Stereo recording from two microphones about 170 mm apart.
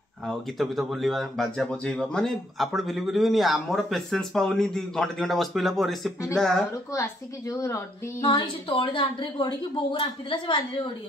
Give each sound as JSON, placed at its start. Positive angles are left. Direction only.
{"t": 0.3, "sound": "speech", "side_deg": 0}
{"t": 6.9, "sound": "a woman's voice", "side_deg": 20}